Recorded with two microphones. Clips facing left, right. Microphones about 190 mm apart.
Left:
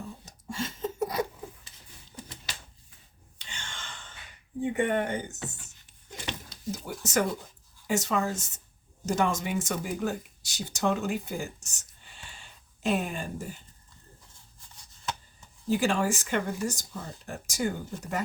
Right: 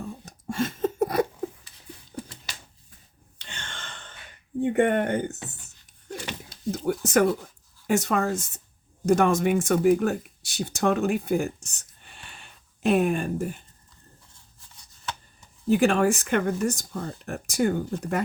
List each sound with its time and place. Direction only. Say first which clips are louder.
0.3 s a sound: right 8 dB; 55° right (ahead or behind)
3.3 s sigh: right 3 dB; 60° right (ahead or behind)
4.6 s speech: right 5 dB; 55° right (ahead or behind)
6.7 s a sound: right 10 dB; 55° right (ahead or behind)
7.0 s speech: right 6 dB; 55° right (ahead or behind)
15.7 s speech: right 6 dB; 60° right (ahead or behind)